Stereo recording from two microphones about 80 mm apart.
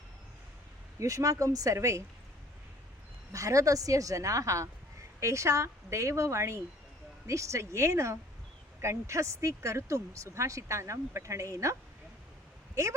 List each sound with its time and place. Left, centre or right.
0.9 s a woman's voice: right
3.3 s a woman's voice: right